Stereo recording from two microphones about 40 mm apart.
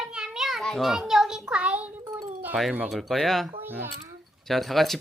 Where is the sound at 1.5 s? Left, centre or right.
Right.